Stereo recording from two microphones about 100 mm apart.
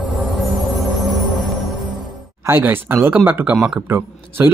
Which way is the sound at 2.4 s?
20° right (ahead or behind).